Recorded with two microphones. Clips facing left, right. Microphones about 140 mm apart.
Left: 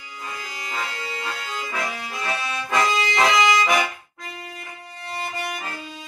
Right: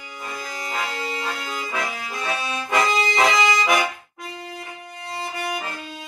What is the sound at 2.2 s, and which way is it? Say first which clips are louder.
Accordion: right 1 dB; 5° right (ahead or behind).